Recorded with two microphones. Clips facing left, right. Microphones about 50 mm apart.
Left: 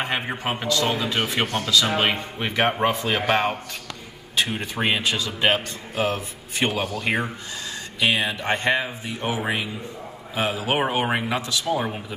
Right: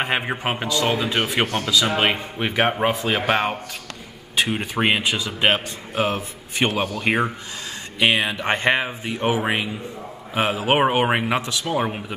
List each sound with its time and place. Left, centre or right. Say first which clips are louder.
0.4 s speech: right 1 dB; centre
4.4 s a man's voice: right 3 dB; centre
8.0 s a man's voice: right 3 dB; right